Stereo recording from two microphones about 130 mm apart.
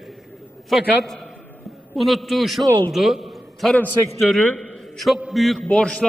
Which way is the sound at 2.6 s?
30° right (ahead or behind).